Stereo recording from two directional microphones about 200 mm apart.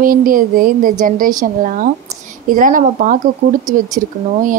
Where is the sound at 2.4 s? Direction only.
40° right (ahead or behind).